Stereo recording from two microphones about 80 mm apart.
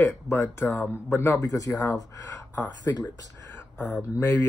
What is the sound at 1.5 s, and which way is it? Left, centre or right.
Speech, left.